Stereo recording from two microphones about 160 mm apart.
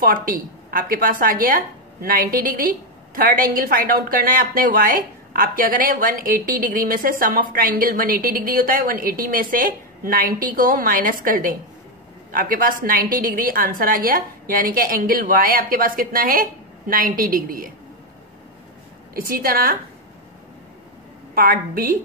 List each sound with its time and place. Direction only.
0.0 s a woman's voice: 65° right (ahead or behind)
19.1 s a woman's voice: 65° right (ahead or behind)
21.4 s a woman's voice: 65° right (ahead or behind)